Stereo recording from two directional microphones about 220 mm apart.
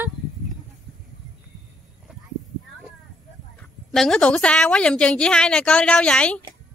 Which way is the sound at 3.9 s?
Centre (ahead or behind).